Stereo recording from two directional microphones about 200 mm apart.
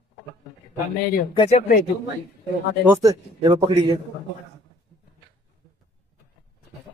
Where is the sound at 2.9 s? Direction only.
20° right (ahead or behind).